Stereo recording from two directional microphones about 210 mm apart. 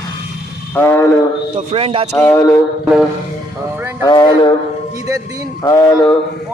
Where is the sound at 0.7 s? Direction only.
10° left (ahead or behind).